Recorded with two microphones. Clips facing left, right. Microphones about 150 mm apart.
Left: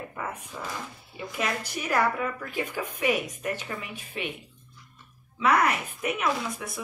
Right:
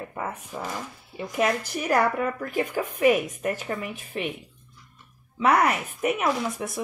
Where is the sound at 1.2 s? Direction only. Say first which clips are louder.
Right 6 dB; 45° right (ahead or behind).